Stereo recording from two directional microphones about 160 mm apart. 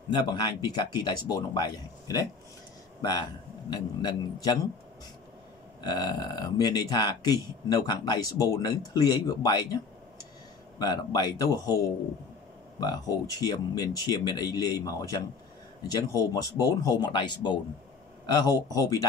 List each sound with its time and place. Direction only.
0.3 s speech: 25° left (ahead or behind)
5.9 s speech: 25° left (ahead or behind)
10.8 s speech: 25° left (ahead or behind)
12.8 s speech: 25° left (ahead or behind)